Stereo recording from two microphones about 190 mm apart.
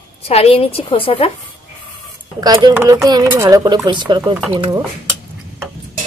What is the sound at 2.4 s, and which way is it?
Speech, 20° right (ahead or behind).